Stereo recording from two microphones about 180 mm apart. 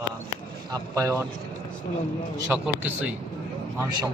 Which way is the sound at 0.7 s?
15° right (ahead or behind).